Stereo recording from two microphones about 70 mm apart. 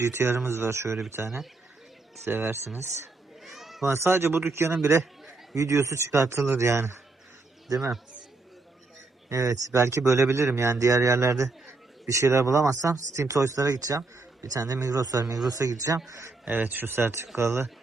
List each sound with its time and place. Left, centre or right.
0.0 s speech: right
2.2 s speech: right
3.4 s children playing: centre
3.8 s speech: right
9.3 s a man's voice: right
16.5 s speech: right